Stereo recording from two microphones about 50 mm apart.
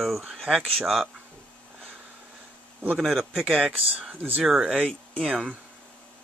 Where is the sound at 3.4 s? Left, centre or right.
Centre.